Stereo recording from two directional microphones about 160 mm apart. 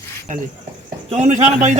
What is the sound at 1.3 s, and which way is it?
Speech, 50° right (ahead or behind).